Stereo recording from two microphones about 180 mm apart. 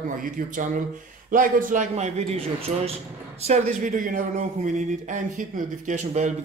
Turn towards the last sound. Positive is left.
turn(degrees=-40)  # may be behind; listen again after turning